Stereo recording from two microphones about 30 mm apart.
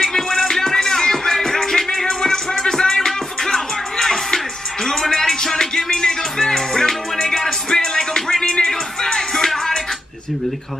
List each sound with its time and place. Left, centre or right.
0.0 s music: centre